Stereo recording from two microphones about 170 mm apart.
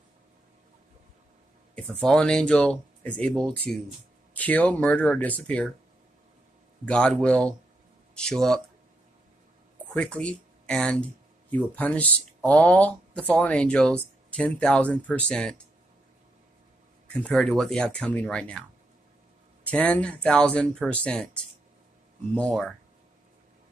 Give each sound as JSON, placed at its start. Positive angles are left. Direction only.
{"t": 1.8, "sound": "speech", "side_deg": 5}
{"t": 6.9, "sound": "speech", "side_deg": 5}
{"t": 9.9, "sound": "speech", "side_deg": 5}
{"t": 17.1, "sound": "speech", "side_deg": 5}
{"t": 19.6, "sound": "speech", "side_deg": 10}
{"t": 22.3, "sound": "speech", "side_deg": 5}